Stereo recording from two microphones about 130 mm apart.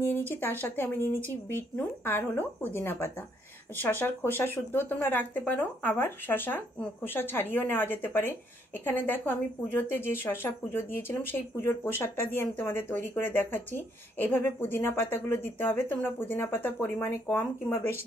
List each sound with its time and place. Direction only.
0.3 s speech: 15° left (ahead or behind)